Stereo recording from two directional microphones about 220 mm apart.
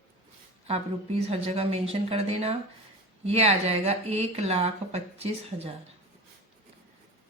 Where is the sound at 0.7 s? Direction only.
25° right (ahead or behind).